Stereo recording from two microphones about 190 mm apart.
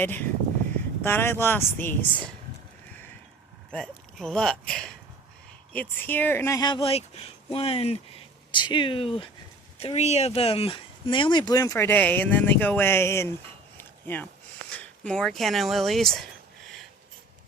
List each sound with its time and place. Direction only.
0.0 s speech: 10° left (ahead or behind)
3.7 s speech: 5° left (ahead or behind)
13.7 s a sound: 10° left (ahead or behind)
14.7 s speech: 5° left (ahead or behind)